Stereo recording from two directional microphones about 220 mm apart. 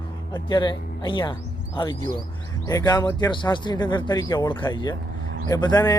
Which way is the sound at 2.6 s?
15° left (ahead or behind).